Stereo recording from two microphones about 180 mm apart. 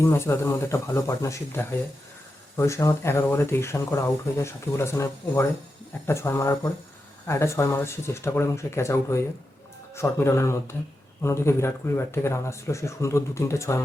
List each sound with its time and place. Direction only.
0.0 s speech: 15° left (ahead or behind)